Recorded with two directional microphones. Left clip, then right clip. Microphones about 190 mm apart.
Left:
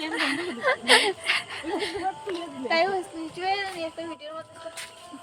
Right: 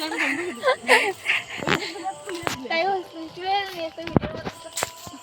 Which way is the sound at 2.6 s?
25° left (ahead or behind).